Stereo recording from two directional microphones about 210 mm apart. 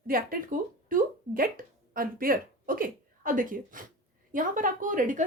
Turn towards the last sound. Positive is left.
turn(degrees=-40)  # may be behind; listen again after turning